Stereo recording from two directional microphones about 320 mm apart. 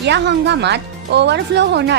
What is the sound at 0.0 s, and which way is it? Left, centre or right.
A woman's voice, right.